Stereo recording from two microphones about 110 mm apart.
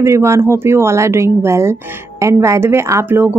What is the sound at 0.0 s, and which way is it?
Speech, 25° right (ahead or behind).